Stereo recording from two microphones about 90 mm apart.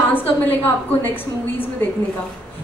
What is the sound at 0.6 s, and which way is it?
Speech, 20° left (ahead or behind).